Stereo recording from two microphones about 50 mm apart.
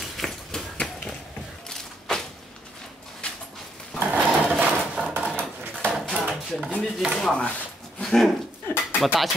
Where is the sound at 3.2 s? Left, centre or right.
Left.